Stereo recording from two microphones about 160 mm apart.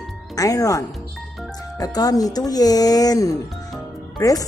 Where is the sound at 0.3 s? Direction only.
20° left (ahead or behind).